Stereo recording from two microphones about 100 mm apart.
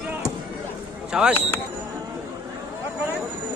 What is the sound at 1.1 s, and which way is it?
Speech, 10° right (ahead or behind).